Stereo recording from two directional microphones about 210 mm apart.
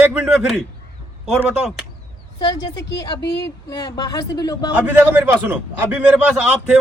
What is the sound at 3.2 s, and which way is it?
Speech, 55° left (ahead or behind).